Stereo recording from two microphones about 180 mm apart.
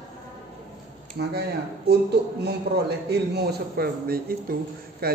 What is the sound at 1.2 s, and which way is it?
A man's voice, 55° right (ahead or behind).